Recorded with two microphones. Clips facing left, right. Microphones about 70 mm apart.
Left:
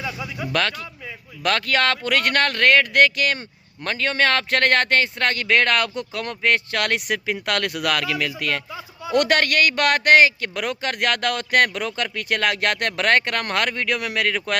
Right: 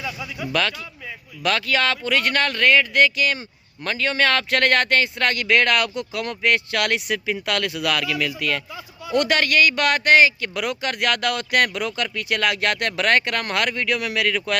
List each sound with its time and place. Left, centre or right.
0.0 s speech: centre
1.5 s speech: left